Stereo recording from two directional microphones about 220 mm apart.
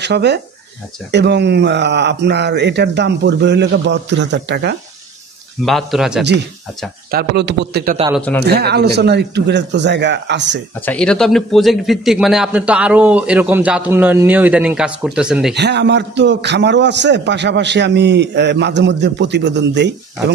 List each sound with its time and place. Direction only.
0.0 s a man's voice: 50° right (ahead or behind)
5.7 s speech: centre (ahead or behind)
7.1 s a man's voice: 45° right (ahead or behind)
8.1 s speech: 5° left (ahead or behind)
8.5 s a man's voice: 45° right (ahead or behind)
10.9 s speech: 5° left (ahead or behind)
15.5 s a man's voice: 50° right (ahead or behind)